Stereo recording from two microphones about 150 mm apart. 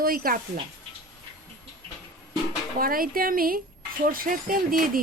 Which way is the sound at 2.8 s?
75° right (ahead or behind).